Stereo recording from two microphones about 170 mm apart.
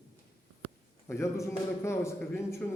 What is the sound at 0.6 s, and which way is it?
A man's voice, 15° left (ahead or behind).